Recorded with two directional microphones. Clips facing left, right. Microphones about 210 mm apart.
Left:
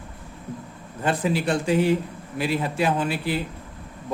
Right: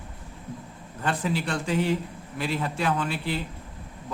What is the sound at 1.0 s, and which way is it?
A man's voice, 10° left (ahead or behind).